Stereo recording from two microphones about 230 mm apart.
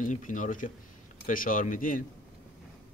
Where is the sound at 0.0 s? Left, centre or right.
Left.